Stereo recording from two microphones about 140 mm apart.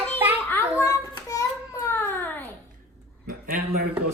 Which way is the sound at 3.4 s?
90° right.